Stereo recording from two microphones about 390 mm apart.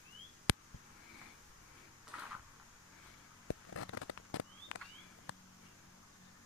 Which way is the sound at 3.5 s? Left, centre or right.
Left.